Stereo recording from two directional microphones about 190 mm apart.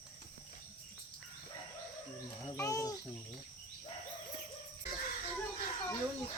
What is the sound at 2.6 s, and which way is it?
Cricket, 20° left (ahead or behind).